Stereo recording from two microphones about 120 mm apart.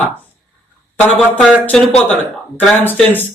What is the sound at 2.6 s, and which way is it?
Speech, 10° left (ahead or behind).